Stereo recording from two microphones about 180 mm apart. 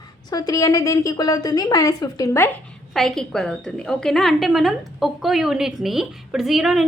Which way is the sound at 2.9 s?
Centre (ahead or behind).